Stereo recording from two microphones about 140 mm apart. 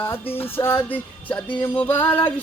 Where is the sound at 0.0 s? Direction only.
15° left (ahead or behind).